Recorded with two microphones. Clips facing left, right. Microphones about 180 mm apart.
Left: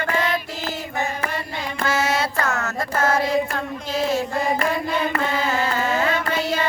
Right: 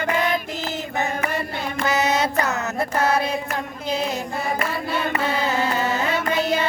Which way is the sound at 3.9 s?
20° right (ahead or behind).